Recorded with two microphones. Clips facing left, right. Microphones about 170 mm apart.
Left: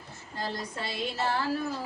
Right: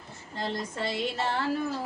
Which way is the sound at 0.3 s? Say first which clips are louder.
Right 2 dB; 25° right (ahead or behind).